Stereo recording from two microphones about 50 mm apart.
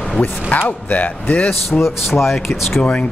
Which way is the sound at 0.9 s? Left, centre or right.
Left.